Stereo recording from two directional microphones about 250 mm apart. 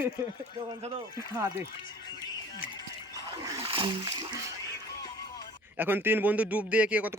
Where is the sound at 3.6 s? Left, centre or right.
Right.